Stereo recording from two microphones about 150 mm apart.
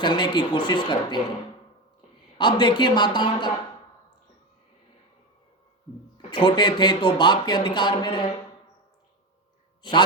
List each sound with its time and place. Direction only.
0.0 s speech: 30° left (ahead or behind)
2.4 s speech: 30° left (ahead or behind)
6.3 s speech: 30° left (ahead or behind)
9.8 s speech: 30° left (ahead or behind)